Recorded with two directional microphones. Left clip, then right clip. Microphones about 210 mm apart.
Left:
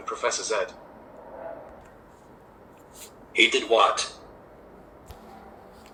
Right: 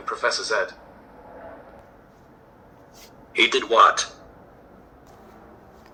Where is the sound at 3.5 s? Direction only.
Centre (ahead or behind).